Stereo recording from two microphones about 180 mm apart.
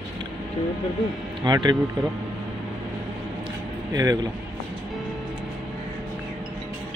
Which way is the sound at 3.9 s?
20° right (ahead or behind).